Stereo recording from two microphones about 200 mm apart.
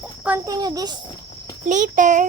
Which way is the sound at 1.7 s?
40° right (ahead or behind).